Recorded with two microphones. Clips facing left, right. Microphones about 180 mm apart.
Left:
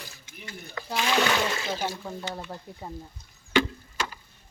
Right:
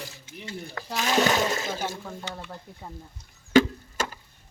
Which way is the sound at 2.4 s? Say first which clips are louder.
Left 2 dB; 15° left (ahead or behind).